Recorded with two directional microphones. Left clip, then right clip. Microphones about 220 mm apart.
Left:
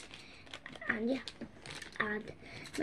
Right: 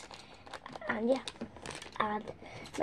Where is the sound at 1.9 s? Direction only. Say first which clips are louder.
Right 3 dB; centre (ahead or behind).